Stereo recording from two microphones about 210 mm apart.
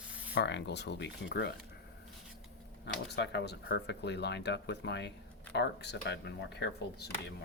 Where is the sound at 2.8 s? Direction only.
55° left (ahead or behind).